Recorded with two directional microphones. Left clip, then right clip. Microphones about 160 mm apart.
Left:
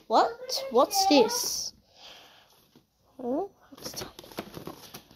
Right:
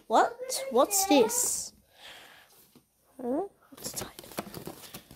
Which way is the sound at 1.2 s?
45° right (ahead or behind).